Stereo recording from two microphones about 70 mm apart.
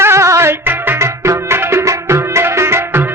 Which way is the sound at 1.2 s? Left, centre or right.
Right.